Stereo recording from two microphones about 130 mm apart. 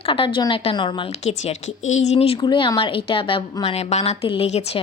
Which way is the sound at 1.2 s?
60° left (ahead or behind).